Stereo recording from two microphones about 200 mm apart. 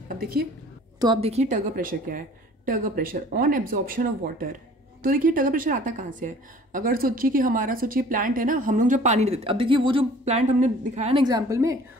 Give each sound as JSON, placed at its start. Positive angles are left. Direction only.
{"t": 0.9, "sound": "a woman's voice", "side_deg": -20}
{"t": 11.2, "sound": "a woman's voice", "side_deg": -15}